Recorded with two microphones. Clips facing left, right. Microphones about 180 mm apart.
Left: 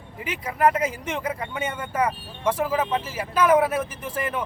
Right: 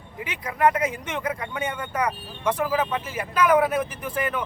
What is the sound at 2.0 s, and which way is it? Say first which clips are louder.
Speech: left 1 dB; 5° left (ahead or behind).